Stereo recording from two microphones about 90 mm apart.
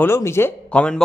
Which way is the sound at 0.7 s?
10° left (ahead or behind).